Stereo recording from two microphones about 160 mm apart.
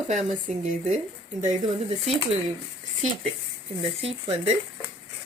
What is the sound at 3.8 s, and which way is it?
Speech, 35° right (ahead or behind).